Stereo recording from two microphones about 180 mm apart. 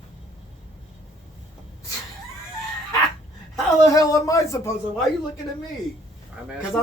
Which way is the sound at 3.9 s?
20° left (ahead or behind).